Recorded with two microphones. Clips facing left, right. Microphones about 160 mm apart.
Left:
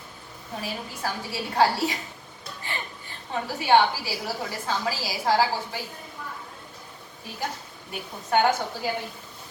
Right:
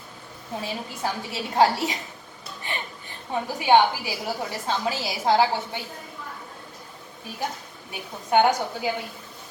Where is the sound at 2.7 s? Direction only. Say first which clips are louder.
Right 2 dB; 20° right (ahead or behind).